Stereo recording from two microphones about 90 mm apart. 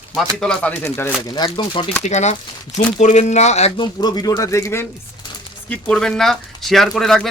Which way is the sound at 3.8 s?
50° left (ahead or behind).